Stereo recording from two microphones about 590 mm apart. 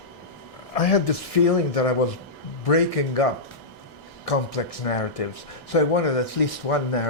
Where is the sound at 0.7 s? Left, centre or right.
Left.